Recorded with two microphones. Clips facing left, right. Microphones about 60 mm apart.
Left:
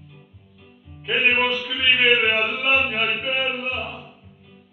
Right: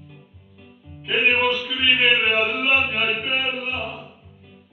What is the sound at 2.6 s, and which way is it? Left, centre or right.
Chant, left.